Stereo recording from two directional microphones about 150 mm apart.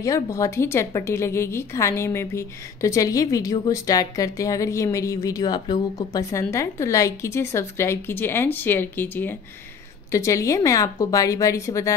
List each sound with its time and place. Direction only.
0.0 s a woman's voice: 20° left (ahead or behind)